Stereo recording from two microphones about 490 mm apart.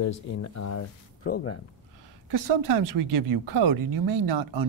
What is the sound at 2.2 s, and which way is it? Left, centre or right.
Speech, right.